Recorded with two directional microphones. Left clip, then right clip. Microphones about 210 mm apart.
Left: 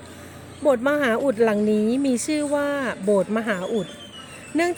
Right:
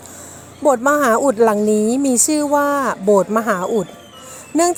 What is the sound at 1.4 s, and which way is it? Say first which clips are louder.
A woman's voice: right 6 dB; 15° right (ahead or behind).